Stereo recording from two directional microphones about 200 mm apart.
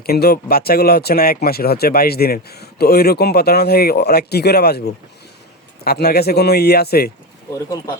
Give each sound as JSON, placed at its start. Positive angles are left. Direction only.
{"t": 0.0, "sound": "speech", "side_deg": 50}
{"t": 5.8, "sound": "speech", "side_deg": 50}